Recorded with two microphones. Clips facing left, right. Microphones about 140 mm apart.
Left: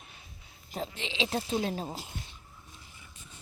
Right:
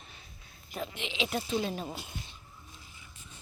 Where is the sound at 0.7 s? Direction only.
30° left (ahead or behind).